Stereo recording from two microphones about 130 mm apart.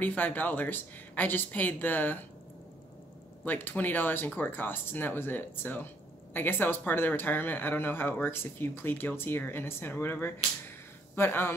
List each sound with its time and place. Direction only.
0.0 s speech: 15° left (ahead or behind)
3.4 s speech: 15° left (ahead or behind)